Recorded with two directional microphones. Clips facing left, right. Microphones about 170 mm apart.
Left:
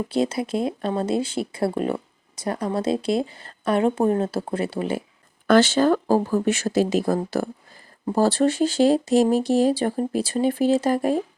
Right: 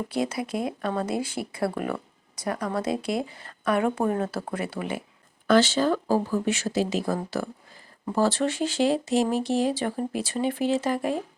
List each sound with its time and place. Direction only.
0.1 s speech: 25° left (ahead or behind)
5.5 s speech: 50° left (ahead or behind)